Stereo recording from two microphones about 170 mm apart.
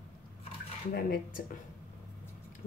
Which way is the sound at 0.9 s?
60° left (ahead or behind).